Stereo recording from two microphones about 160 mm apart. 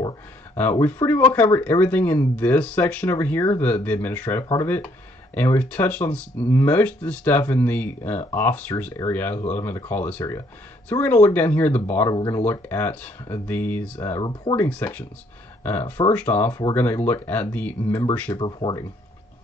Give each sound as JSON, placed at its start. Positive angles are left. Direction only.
{"t": 0.6, "sound": "speech", "side_deg": 10}
{"t": 18.4, "sound": "speech", "side_deg": 30}